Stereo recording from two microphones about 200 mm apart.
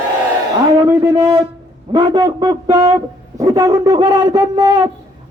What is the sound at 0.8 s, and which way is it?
Speech, 10° right (ahead or behind).